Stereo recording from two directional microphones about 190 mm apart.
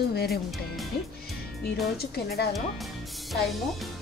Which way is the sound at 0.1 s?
55° left (ahead or behind).